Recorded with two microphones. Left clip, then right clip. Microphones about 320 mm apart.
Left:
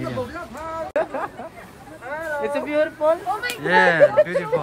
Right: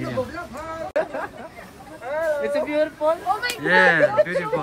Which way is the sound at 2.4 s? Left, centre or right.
Left.